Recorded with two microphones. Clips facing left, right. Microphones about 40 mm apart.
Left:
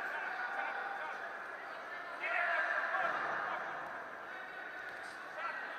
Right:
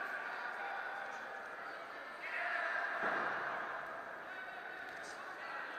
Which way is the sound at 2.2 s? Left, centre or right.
Left.